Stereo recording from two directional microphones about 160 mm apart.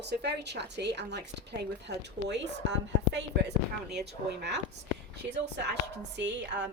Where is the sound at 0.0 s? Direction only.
90° right.